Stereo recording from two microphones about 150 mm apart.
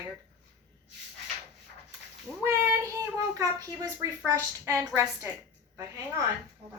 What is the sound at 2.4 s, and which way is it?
Child singing, 15° right (ahead or behind).